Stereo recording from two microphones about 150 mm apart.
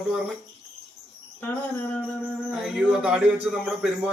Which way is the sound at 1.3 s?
15° left (ahead or behind).